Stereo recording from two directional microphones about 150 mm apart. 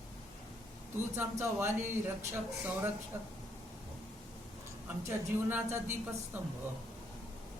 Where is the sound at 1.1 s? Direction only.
15° right (ahead or behind).